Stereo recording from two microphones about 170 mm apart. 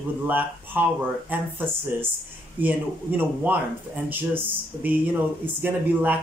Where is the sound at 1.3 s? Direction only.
10° right (ahead or behind).